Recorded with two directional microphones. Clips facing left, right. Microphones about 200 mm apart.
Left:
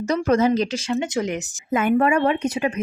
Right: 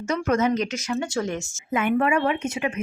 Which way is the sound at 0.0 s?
35° left (ahead or behind).